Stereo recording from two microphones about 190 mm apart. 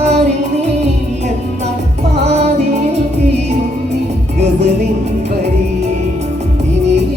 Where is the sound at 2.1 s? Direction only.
35° right (ahead or behind).